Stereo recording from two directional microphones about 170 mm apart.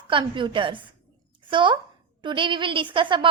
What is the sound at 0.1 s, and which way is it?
A woman's voice, 30° right (ahead or behind).